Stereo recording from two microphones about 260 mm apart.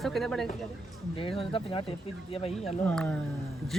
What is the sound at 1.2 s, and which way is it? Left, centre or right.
Speech, left.